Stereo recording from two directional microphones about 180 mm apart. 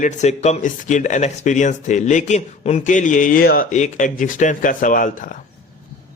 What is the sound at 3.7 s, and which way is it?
A man's voice, 45° left (ahead or behind).